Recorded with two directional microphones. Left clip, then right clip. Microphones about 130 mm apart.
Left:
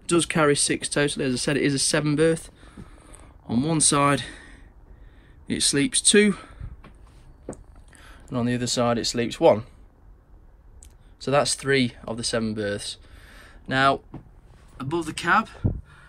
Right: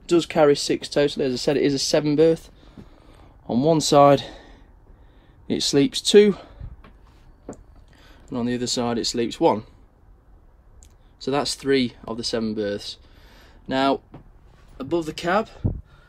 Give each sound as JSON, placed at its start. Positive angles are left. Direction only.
{"t": 0.0, "sound": "speech", "side_deg": -5}
{"t": 7.5, "sound": "speech", "side_deg": -10}
{"t": 11.1, "sound": "speech", "side_deg": -5}